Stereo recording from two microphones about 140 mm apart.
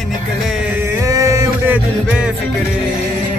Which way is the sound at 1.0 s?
25° right (ahead or behind).